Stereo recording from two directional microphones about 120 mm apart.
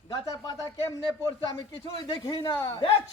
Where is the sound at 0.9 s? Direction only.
30° left (ahead or behind).